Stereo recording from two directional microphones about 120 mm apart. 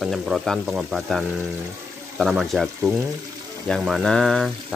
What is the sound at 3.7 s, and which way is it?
Speech, centre (ahead or behind).